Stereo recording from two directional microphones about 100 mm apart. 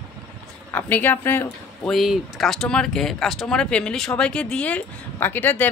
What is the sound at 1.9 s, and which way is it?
Speech, centre (ahead or behind).